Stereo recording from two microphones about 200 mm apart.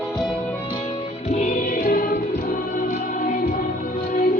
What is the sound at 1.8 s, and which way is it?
Choir, 45° left (ahead or behind).